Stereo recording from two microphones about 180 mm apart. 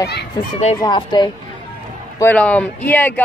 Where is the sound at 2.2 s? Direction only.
10° left (ahead or behind).